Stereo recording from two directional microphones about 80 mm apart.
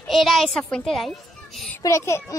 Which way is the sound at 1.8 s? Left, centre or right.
Left.